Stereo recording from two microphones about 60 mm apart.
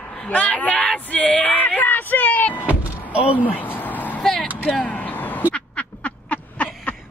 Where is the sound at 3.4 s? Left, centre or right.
Left.